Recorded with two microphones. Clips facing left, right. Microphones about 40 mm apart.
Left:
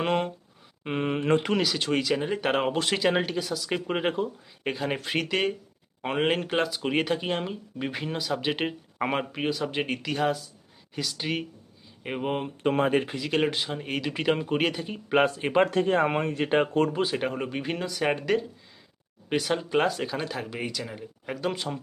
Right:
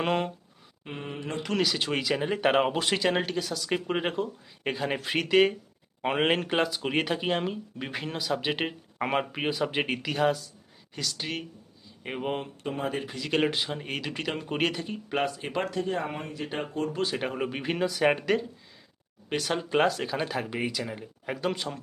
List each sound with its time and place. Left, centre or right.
0.0 s speech: centre
0.9 s speech: left
1.5 s speech: centre
9.3 s speech: centre
12.8 s speech: left
13.1 s speech: centre
15.1 s speech: left
15.7 s speech: left
17.1 s speech: centre